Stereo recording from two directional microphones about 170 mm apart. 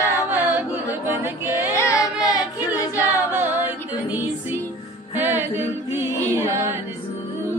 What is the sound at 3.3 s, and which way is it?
Music, 10° right (ahead or behind).